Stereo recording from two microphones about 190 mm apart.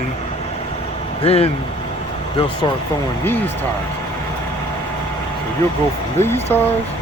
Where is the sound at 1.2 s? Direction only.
30° left (ahead or behind).